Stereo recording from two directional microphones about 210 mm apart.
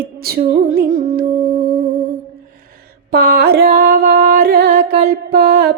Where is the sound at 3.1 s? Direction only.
50° right (ahead or behind).